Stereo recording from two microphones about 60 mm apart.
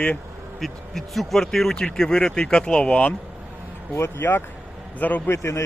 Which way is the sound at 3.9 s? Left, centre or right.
Left.